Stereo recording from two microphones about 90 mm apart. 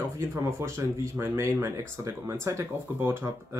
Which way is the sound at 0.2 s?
30° right (ahead or behind).